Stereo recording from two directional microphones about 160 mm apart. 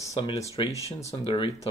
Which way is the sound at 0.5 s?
40° left (ahead or behind).